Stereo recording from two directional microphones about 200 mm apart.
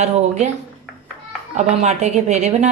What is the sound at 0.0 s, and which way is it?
Speech, 35° right (ahead or behind).